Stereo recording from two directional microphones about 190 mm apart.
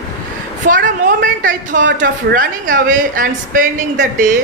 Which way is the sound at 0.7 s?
45° right (ahead or behind).